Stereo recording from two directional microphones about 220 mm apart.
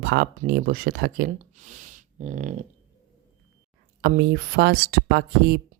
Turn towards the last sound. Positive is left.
turn(degrees=-50)  # may be behind; listen again after turning